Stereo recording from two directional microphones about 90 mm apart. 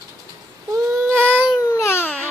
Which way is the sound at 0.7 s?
30° right (ahead or behind).